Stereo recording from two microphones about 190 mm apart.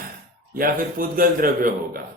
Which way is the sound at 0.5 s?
50° right (ahead or behind).